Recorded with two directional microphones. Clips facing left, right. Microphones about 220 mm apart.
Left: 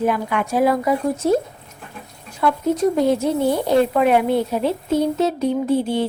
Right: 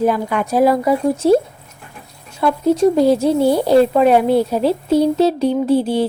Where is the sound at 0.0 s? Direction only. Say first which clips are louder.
Right 3 dB; 35° right (ahead or behind).